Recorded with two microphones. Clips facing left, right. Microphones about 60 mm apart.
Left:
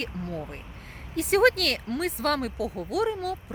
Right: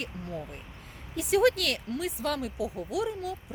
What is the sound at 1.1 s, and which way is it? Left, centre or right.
Speech, left.